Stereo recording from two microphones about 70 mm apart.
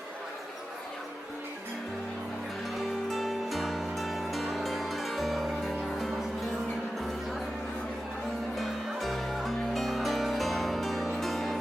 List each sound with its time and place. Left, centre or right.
2.7 s music: centre
8.5 s music: centre